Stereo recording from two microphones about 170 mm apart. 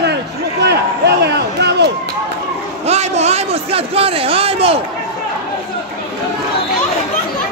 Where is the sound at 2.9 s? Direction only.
40° right (ahead or behind).